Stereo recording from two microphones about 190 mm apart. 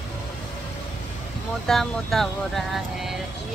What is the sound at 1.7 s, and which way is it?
Speech, centre (ahead or behind).